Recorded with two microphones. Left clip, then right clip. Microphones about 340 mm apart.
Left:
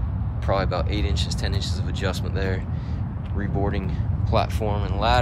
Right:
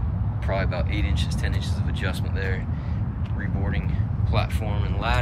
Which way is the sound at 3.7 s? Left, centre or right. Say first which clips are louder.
Left 1 dB; centre.